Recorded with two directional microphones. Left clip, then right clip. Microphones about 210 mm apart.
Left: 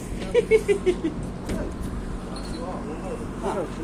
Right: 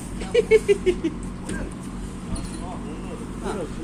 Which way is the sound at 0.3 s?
20° right (ahead or behind).